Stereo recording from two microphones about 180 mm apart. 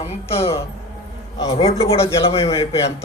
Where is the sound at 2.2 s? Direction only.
35° left (ahead or behind).